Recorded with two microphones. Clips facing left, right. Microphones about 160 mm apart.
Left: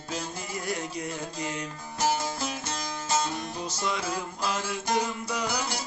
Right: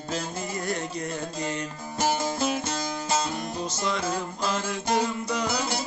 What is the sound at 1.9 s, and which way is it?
Music, 20° right (ahead or behind).